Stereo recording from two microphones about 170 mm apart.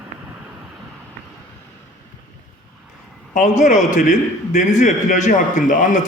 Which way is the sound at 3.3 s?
45° left (ahead or behind).